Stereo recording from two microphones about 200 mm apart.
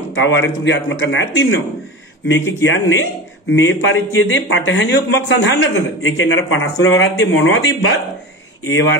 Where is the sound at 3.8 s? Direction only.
80° left.